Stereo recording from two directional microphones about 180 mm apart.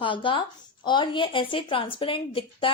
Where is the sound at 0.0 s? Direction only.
30° left (ahead or behind).